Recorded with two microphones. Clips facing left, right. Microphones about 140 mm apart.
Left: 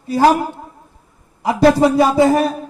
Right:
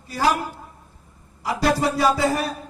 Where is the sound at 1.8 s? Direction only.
25° left (ahead or behind).